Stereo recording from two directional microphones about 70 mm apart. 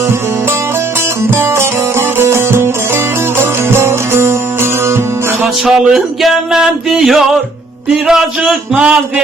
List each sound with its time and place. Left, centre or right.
1.2 s music: right
5.6 s music: centre